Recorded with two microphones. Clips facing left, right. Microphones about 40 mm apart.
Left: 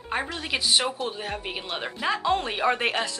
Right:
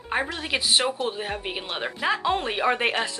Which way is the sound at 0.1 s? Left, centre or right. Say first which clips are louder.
Right 2 dB; centre.